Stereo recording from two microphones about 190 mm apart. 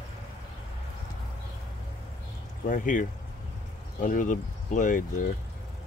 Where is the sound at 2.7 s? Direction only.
45° left (ahead or behind).